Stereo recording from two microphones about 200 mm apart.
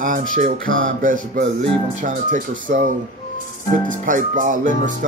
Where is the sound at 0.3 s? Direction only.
40° right (ahead or behind).